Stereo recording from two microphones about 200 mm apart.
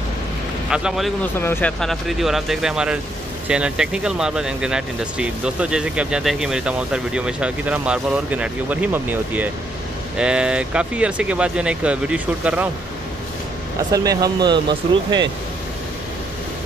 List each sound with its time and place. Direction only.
0.7 s speech: 5° right (ahead or behind)
13.9 s speech: 20° right (ahead or behind)